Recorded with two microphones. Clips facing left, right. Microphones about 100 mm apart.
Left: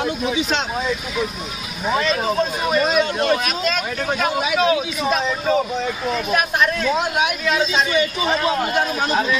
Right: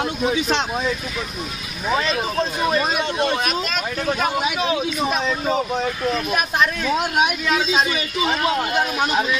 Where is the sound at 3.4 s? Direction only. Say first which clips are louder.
Left 1 dB; 25° right (ahead or behind).